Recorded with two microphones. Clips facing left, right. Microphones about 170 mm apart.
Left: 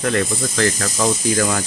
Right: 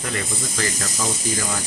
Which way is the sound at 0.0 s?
65° left (ahead or behind).